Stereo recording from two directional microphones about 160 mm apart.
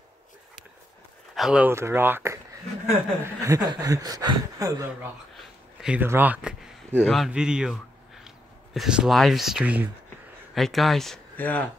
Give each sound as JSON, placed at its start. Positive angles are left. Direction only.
{"t": 1.3, "sound": "speech", "side_deg": -5}
{"t": 3.4, "sound": "speech", "side_deg": -20}
{"t": 5.4, "sound": "a man's voice", "side_deg": -5}